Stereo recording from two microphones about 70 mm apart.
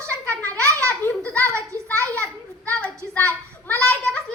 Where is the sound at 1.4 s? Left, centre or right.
Right.